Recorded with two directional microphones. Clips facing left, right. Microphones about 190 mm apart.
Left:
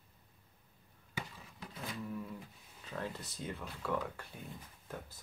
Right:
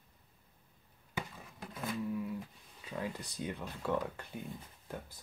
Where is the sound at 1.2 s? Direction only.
50° right (ahead or behind).